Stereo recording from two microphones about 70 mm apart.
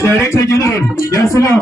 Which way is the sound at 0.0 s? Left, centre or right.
Left.